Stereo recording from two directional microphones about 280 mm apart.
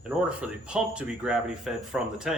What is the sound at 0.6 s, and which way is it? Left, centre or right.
Speech, centre.